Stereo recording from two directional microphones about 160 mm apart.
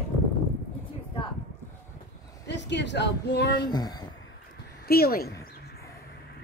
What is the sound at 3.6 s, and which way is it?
Speech, 25° left (ahead or behind).